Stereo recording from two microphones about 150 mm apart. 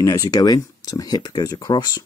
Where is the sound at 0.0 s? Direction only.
25° left (ahead or behind).